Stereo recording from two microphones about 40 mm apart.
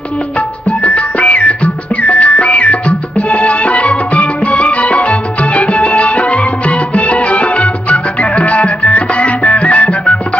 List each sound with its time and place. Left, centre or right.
0.7 s music: left